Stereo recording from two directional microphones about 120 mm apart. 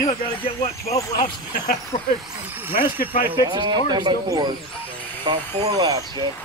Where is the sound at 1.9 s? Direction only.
70° left (ahead or behind).